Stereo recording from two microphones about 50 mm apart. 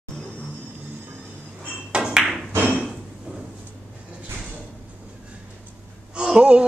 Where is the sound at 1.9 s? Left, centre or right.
Centre.